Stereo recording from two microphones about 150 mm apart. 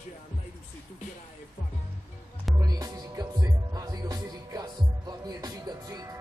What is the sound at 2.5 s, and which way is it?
Music, 25° right (ahead or behind).